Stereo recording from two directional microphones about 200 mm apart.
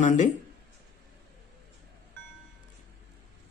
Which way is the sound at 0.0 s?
35° left (ahead or behind).